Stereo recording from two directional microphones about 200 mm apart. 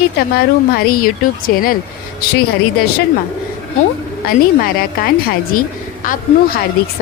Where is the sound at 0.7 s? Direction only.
45° left (ahead or behind).